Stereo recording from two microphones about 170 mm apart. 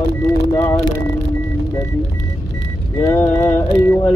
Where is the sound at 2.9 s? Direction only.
15° left (ahead or behind).